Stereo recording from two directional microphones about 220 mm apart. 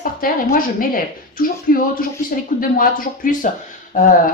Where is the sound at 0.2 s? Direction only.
40° left (ahead or behind).